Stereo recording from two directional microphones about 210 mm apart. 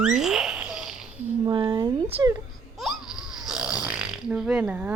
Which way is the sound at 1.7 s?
25° right (ahead or behind).